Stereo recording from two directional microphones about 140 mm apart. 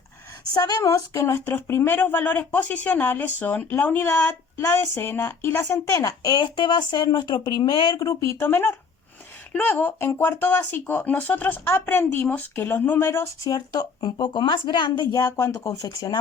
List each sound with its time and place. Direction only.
0.5 s speech: 25° left (ahead or behind)